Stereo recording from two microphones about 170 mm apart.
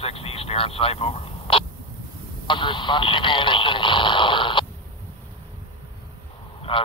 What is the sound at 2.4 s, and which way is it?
Radio, 30° left (ahead or behind).